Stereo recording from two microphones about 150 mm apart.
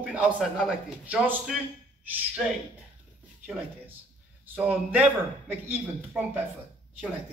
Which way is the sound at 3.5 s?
10° right (ahead or behind).